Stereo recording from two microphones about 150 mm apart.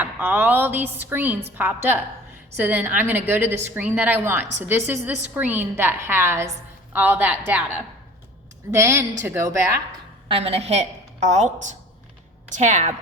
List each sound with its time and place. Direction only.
0.0 s a woman's voice: 15° right (ahead or behind)
8.7 s a woman's voice: 15° right (ahead or behind)
10.2 s a woman's voice: 40° right (ahead or behind)